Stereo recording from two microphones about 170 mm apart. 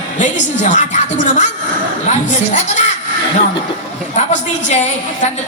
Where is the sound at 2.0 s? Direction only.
45° left (ahead or behind).